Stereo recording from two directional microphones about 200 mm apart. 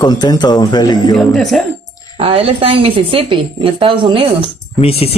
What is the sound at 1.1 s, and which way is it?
Speech, centre (ahead or behind).